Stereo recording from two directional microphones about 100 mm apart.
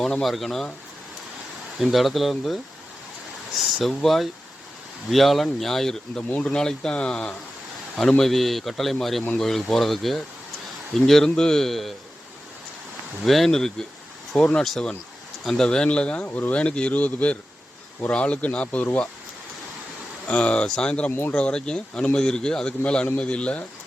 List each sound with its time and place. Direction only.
0.0 s speech: centre (ahead or behind)
1.8 s speech: centre (ahead or behind)
3.8 s speech: centre (ahead or behind)
13.2 s speech: centre (ahead or behind)
20.2 s speech: 10° left (ahead or behind)
21.1 s speech: 20° left (ahead or behind)
21.3 s speech: 10° left (ahead or behind)